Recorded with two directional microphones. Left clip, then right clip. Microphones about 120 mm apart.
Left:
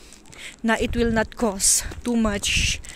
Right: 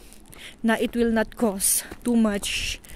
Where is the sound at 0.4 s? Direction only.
25° right (ahead or behind).